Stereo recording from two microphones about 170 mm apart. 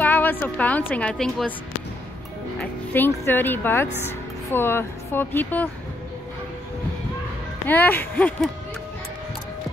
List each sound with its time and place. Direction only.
0.0 s a woman's voice: 10° left (ahead or behind)
2.6 s speech: 10° left (ahead or behind)
7.6 s speech: 10° left (ahead or behind)